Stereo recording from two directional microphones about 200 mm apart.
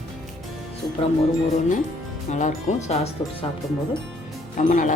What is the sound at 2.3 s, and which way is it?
Speech, 35° left (ahead or behind).